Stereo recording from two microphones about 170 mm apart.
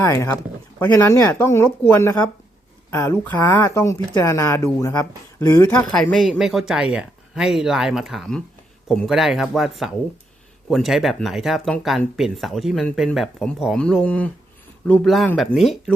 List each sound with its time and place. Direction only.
0.0 s speech: 15° left (ahead or behind)
6.0 s speech: centre (ahead or behind)